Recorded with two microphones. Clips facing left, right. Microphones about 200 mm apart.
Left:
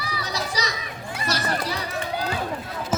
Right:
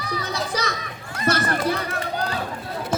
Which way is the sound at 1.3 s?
55° right (ahead or behind).